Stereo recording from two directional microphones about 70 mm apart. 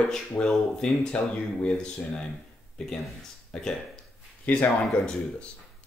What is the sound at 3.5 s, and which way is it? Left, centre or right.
Speech, centre.